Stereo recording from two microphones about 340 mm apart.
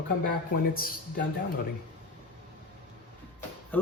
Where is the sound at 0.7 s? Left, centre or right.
Left.